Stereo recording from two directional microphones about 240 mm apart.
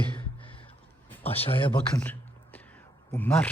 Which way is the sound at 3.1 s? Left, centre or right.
Centre.